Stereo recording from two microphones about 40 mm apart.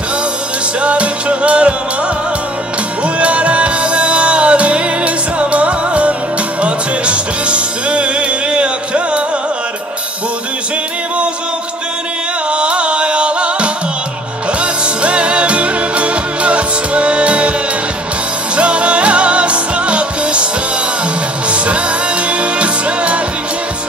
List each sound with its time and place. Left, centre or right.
0.7 s music: right
3.0 s music: right
12.4 s music: right
18.6 s music: right
21.5 s music: right